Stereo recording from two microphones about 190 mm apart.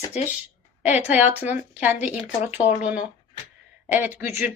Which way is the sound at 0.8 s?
10° right (ahead or behind).